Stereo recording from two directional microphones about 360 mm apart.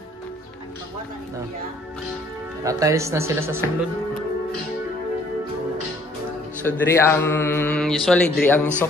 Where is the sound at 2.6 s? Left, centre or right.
Centre.